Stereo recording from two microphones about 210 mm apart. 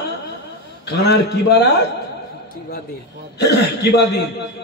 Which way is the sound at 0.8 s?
50° left (ahead or behind).